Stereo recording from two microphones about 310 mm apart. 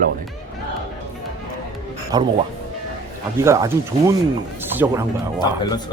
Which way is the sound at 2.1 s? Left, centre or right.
Centre.